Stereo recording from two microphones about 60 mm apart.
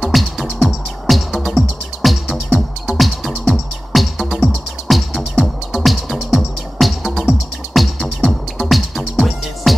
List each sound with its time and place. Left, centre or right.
0.0 s music: centre